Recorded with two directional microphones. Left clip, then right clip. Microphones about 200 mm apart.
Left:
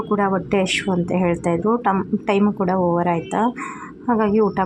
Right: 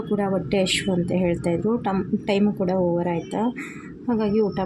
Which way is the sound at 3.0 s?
10° left (ahead or behind).